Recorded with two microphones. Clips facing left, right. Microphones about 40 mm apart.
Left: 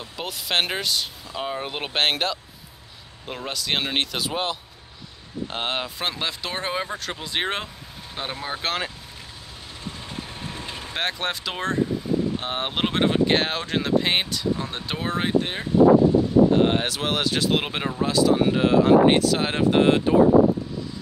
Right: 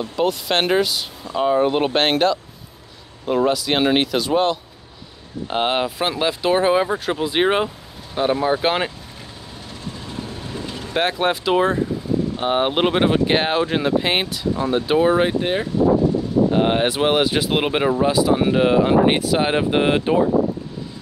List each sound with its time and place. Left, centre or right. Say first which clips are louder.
0.0 s speech: right 12 dB; centre
5.5 s speech: right 9 dB; centre
10.9 s speech: right 8 dB; centre